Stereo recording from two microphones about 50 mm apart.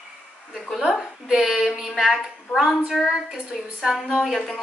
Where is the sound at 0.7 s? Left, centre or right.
Centre.